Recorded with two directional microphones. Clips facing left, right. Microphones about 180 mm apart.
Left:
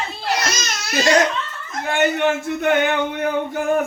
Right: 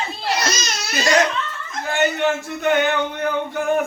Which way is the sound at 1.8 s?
55° left (ahead or behind).